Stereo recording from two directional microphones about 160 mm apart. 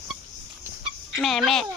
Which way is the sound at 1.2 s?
Centre (ahead or behind).